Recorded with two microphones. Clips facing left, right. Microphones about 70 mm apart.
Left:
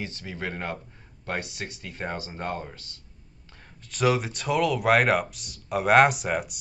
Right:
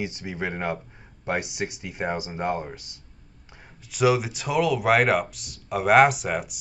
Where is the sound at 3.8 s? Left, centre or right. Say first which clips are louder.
Right 3 dB; centre.